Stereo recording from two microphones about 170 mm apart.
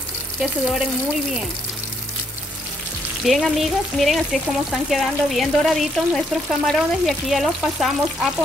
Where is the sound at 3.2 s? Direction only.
Centre (ahead or behind).